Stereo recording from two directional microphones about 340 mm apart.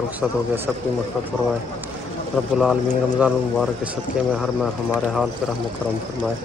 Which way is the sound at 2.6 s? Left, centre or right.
Centre.